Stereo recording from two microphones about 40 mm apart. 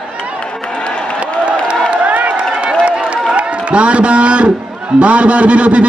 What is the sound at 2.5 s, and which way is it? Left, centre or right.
Run, right.